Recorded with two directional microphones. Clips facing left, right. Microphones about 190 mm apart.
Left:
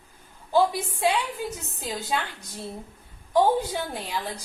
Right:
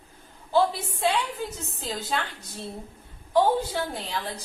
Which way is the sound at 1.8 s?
15° left (ahead or behind).